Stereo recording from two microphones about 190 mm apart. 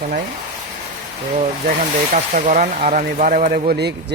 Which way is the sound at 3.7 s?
60° right (ahead or behind).